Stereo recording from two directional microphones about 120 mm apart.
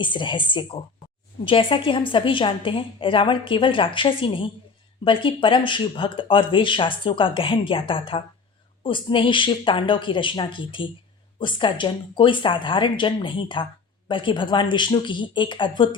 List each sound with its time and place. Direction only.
0.0 s speech: 40° left (ahead or behind)